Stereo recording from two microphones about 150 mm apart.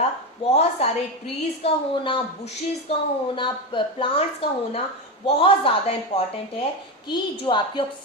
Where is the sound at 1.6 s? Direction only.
40° left (ahead or behind).